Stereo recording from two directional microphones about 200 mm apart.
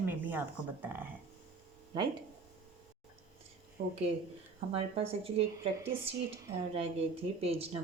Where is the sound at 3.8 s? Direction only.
45° right (ahead or behind).